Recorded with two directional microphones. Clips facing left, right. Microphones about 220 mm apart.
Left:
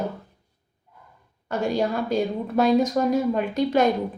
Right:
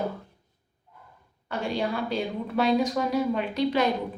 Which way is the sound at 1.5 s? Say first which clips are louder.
Left 5 dB; 45° left (ahead or behind).